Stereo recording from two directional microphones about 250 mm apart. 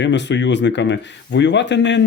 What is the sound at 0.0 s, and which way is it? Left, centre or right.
Speech, left.